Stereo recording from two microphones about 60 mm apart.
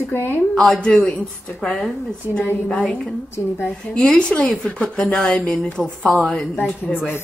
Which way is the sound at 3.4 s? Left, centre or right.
Left.